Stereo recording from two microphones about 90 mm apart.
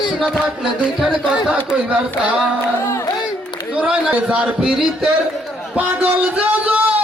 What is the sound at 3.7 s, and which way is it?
A man's voice, 15° right (ahead or behind).